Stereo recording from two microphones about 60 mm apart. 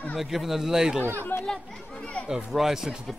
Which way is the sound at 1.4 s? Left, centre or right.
Centre.